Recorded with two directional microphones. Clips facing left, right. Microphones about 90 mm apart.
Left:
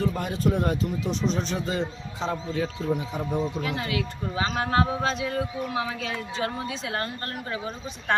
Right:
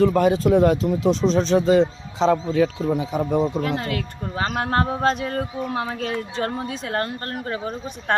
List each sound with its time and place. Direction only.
0.0 s a man's voice: 90° right
3.6 s speech: 40° right (ahead or behind)